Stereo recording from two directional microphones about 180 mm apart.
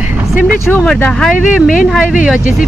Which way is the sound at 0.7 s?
5° left (ahead or behind).